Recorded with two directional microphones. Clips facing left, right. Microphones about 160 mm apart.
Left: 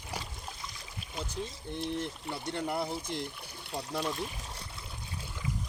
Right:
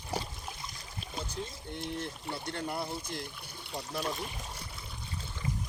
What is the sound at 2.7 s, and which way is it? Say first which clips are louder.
Speech: left 4 dB; 20° left (ahead or behind).